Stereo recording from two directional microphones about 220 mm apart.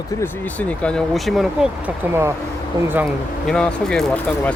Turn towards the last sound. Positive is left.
turn(degrees=5)  # may be behind; listen again after turning